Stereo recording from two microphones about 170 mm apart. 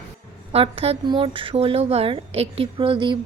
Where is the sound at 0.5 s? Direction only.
35° right (ahead or behind).